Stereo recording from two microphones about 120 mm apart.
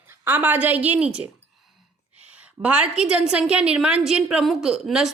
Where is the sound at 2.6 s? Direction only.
10° right (ahead or behind).